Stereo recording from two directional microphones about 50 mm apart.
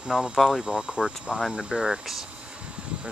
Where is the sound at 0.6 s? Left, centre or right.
Centre.